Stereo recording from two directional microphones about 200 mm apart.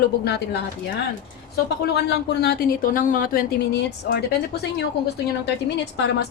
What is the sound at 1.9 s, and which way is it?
Speech, 55° left (ahead or behind).